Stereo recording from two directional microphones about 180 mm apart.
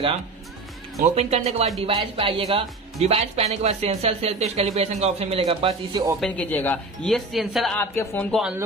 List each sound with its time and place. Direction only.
1.0 s speech: 35° right (ahead or behind)
6.2 s speech: 5° left (ahead or behind)
7.8 s speech: 15° left (ahead or behind)
8.3 s speech: centre (ahead or behind)